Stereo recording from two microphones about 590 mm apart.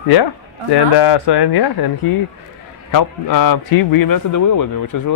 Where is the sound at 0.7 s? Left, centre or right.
Left.